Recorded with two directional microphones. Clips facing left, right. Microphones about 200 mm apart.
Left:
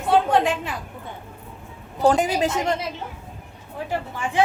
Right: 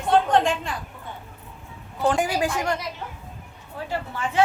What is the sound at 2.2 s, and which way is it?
Speech, 20° left (ahead or behind).